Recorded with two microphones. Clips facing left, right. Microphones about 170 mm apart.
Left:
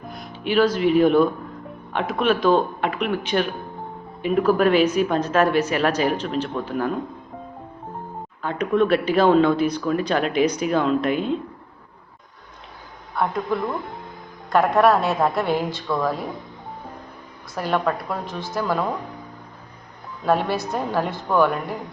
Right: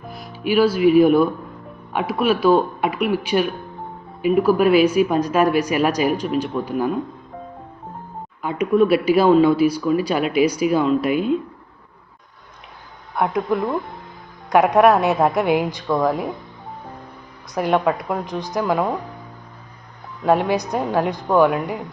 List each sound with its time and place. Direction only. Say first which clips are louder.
0.1 s speech: right 3 dB; 5° right (ahead or behind)
8.4 s speech: right 3 dB; 10° right (ahead or behind)
13.1 s speech: right 3 dB; 15° right (ahead or behind)
17.5 s speech: right 4 dB; 15° right (ahead or behind)
20.2 s speech: right 3 dB; 15° right (ahead or behind)